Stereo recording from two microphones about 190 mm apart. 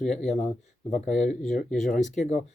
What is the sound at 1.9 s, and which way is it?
Speech, 40° left (ahead or behind).